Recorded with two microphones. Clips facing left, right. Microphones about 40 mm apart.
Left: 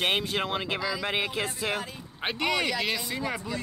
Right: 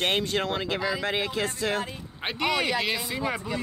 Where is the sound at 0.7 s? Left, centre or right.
Centre.